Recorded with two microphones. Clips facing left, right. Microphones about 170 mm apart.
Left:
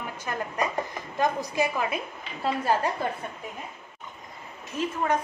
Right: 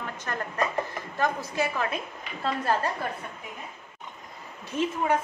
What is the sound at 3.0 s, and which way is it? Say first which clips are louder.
Speech: left 3 dB; 20° left (ahead or behind).